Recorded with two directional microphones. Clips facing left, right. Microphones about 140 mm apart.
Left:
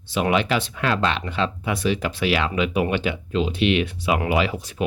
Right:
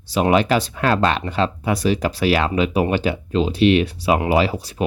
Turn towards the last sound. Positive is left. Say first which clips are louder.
# right 4 dB
turn(degrees=-35)  # may be behind; listen again after turning